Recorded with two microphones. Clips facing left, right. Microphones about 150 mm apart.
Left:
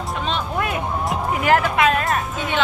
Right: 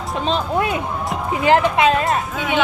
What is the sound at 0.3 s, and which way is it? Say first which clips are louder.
Speech: right 5 dB; 30° right (ahead or behind).